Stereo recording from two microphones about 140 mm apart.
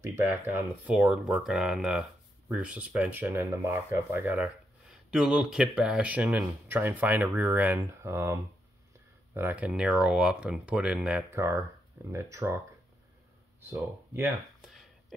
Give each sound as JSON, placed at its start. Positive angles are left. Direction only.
{"t": 0.0, "sound": "speech", "side_deg": -15}
{"t": 11.2, "sound": "speech", "side_deg": -20}
{"t": 13.7, "sound": "speech", "side_deg": -15}
{"t": 14.7, "sound": "a sound", "side_deg": 0}